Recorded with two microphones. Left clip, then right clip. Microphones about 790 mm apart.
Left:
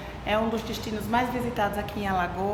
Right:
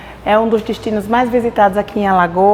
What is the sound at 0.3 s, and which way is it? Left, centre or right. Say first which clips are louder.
A woman's voice: right 14 dB; right.